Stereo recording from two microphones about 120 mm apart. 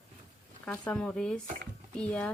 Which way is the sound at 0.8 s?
10° left (ahead or behind).